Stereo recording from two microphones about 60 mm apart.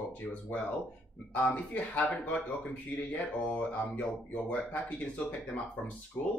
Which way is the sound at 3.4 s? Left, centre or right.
Left.